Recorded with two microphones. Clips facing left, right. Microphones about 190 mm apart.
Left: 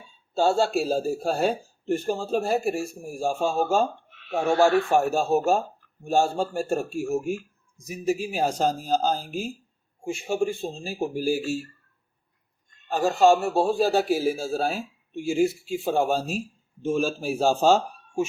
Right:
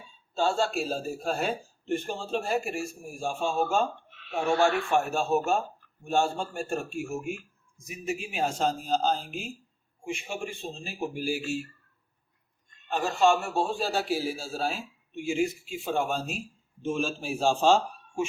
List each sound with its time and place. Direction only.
0.6 s speech: 40° left (ahead or behind)
12.9 s speech: 35° left (ahead or behind)